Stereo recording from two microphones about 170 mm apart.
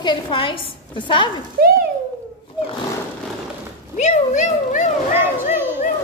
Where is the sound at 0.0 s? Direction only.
30° left (ahead or behind).